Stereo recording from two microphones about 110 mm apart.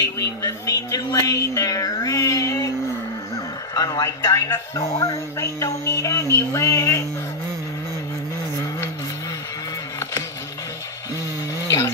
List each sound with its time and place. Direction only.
0.4 s a woman's voice: 30° left (ahead or behind)
3.7 s a woman's voice: 35° left (ahead or behind)
11.6 s a sound: 30° left (ahead or behind)